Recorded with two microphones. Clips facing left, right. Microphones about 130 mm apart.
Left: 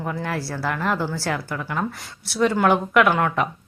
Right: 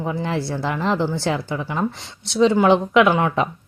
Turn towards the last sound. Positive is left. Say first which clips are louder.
# right 2 dB
turn(degrees=-20)  # may be behind; listen again after turning